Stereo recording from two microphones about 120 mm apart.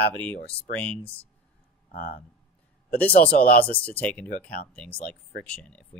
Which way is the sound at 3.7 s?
10° left (ahead or behind).